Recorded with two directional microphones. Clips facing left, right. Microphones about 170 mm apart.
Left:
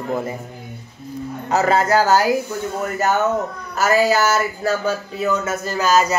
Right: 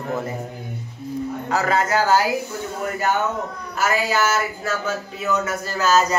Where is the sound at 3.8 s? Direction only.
40° left (ahead or behind); by 6.2 s 10° left (ahead or behind).